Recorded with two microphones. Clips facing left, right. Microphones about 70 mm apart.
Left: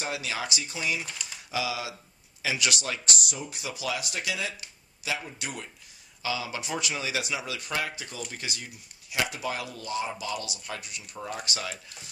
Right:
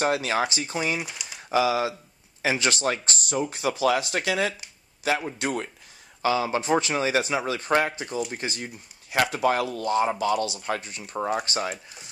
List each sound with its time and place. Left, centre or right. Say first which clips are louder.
0.0 s speech: right 9 dB; right
1.0 s speech: right 2 dB; centre
1.5 s speech: right 9 dB; right